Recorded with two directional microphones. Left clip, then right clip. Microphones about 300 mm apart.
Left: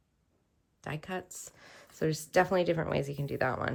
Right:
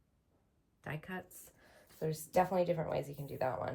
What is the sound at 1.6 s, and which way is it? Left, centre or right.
Speech, left.